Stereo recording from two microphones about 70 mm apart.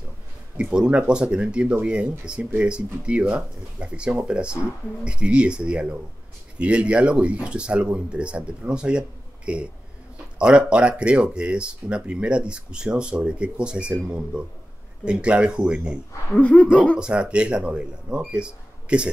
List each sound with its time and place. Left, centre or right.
0.6 s speech: centre
16.3 s speech: left
17.0 s speech: centre